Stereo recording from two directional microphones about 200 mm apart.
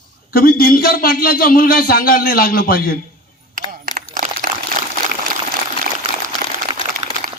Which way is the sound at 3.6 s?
40° right (ahead or behind).